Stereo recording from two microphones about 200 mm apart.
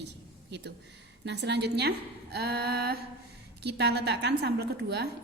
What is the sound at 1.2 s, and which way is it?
A woman's voice, 60° right (ahead or behind).